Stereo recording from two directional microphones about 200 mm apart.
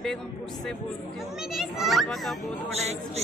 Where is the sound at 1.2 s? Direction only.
Centre (ahead or behind).